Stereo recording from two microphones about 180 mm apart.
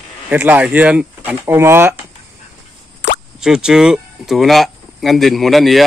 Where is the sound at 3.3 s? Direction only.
5° right (ahead or behind).